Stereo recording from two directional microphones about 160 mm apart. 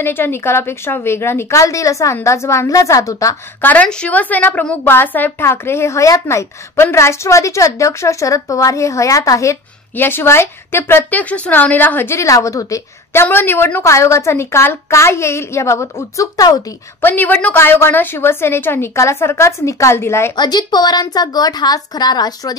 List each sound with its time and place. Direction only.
0.0 s a woman's voice: 15° left (ahead or behind)
3.7 s a woman's voice: 5° left (ahead or behind); by 16.6 s 20° left (ahead or behind)
17.0 s a woman's voice: 10° left (ahead or behind)